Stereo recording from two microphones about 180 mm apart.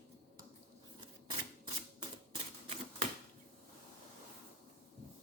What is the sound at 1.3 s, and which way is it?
Camera, 25° right (ahead or behind).